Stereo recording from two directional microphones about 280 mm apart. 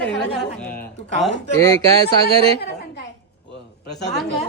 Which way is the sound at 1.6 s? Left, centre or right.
Centre.